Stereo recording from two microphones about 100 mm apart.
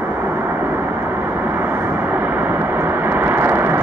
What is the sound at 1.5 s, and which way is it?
Vehicle, 20° right (ahead or behind).